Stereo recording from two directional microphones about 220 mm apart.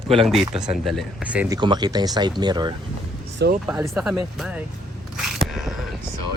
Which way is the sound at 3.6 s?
5° right (ahead or behind).